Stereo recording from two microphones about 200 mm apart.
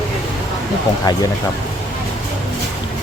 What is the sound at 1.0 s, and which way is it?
Speech, 20° left (ahead or behind).